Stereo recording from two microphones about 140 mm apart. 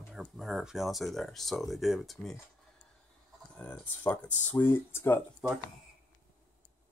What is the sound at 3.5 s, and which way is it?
Speech, 5° left (ahead or behind).